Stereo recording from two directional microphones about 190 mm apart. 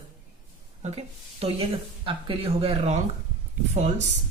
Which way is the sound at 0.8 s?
30° right (ahead or behind).